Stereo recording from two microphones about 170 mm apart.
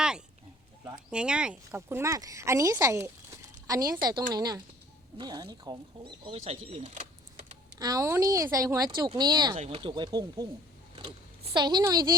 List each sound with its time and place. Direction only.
1.1 s speech: 5° right (ahead or behind); by 7.4 s 40° right (ahead or behind)
7.8 s speech: 20° right (ahead or behind)
11.5 s speech: 25° right (ahead or behind)